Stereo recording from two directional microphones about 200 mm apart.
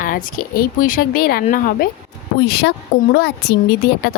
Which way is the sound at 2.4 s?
50° left (ahead or behind).